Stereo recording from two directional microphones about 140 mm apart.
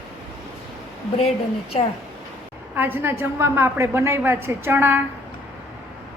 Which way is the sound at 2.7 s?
15° right (ahead or behind).